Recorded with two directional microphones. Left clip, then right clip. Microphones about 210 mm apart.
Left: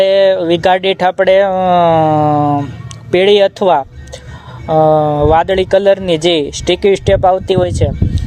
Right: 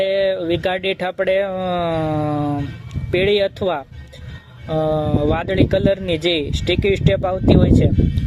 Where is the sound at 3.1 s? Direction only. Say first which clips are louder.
Left 8 dB; centre (ahead or behind).